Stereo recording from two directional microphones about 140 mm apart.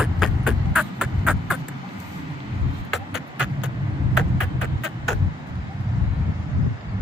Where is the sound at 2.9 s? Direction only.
5° right (ahead or behind).